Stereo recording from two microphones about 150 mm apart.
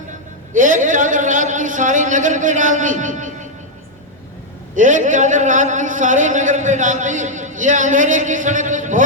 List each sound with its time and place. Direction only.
0.5 s a man's voice: 60° right (ahead or behind)
4.7 s a man's voice: 55° right (ahead or behind)